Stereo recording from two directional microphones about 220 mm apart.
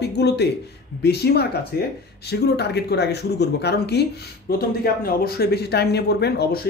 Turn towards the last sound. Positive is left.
turn(degrees=45)  # may be behind; listen again after turning